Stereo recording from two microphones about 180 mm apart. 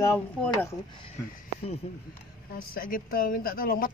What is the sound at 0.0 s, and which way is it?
Speech, 15° left (ahead or behind).